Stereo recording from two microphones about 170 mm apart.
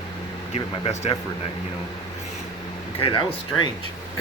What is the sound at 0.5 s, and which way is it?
Speech, 35° left (ahead or behind).